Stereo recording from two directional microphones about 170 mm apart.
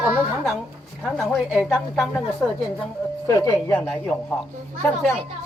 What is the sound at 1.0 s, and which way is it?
A woman's voice, centre (ahead or behind).